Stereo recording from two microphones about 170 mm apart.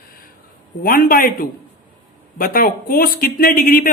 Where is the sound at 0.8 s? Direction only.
55° left (ahead or behind).